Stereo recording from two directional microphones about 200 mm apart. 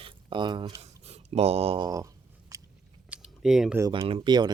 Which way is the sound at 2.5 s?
15° right (ahead or behind).